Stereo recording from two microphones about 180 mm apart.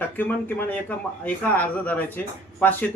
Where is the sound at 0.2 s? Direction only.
10° left (ahead or behind).